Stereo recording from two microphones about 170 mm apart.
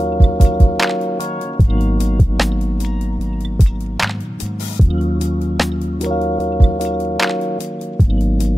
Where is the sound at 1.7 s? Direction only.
30° left (ahead or behind).